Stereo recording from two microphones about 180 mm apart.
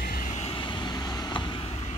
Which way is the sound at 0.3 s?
30° left (ahead or behind).